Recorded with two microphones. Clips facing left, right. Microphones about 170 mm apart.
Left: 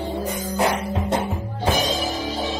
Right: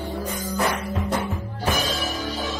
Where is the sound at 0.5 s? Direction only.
25° left (ahead or behind).